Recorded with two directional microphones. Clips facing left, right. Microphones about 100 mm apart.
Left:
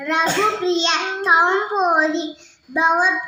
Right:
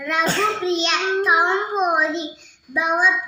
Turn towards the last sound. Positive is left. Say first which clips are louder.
# left 3 dB
turn(degrees=30)  # may be behind; listen again after turning